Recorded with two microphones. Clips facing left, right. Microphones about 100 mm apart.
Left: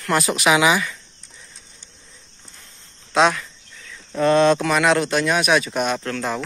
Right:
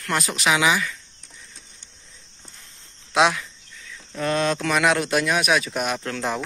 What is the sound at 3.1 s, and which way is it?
Speech, 10° right (ahead or behind).